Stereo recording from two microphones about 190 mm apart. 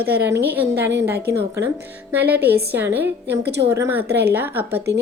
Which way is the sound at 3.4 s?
60° right (ahead or behind).